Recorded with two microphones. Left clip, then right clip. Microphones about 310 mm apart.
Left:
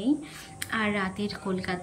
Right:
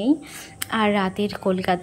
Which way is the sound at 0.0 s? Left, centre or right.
Centre.